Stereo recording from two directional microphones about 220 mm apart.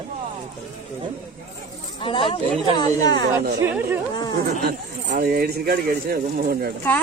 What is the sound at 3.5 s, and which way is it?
Speech, 10° right (ahead or behind).